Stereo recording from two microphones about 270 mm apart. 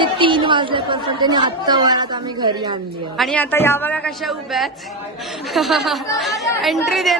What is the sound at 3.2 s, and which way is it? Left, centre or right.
Speech, centre.